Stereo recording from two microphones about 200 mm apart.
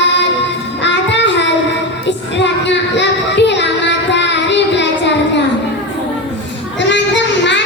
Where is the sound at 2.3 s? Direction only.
60° left (ahead or behind).